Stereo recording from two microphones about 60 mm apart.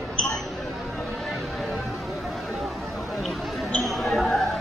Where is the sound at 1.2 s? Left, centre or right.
Centre.